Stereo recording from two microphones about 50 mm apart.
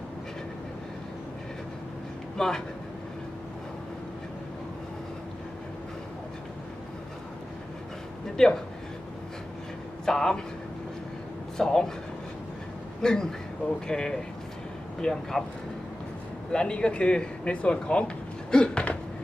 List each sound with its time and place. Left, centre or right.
2.4 s speech: centre
8.4 s speech: centre
10.1 s speech: centre
11.5 s speech: centre
13.0 s speech: centre
16.5 s speech: centre
18.5 s a sound: centre